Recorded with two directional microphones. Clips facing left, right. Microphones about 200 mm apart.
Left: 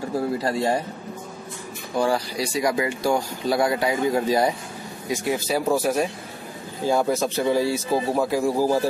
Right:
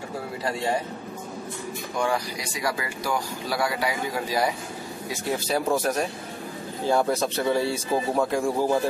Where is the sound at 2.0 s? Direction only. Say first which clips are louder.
Left 5 dB; 35° left (ahead or behind).